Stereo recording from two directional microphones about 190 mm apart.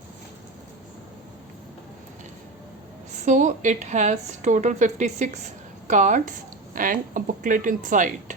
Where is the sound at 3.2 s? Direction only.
40° right (ahead or behind).